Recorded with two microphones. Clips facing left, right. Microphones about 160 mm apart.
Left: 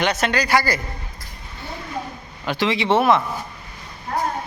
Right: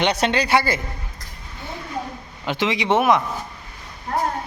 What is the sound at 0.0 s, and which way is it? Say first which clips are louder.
Speech: right 1 dB; 30° right (ahead or behind).